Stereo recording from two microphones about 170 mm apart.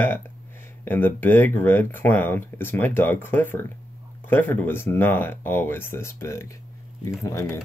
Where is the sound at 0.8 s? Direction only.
10° left (ahead or behind).